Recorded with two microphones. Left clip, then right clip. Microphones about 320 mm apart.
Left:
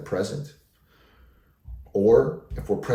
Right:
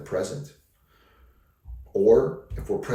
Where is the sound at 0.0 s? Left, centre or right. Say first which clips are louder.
Left 1 dB; centre.